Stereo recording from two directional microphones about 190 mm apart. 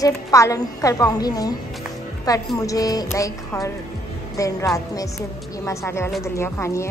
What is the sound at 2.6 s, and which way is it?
A woman's voice, 20° left (ahead or behind).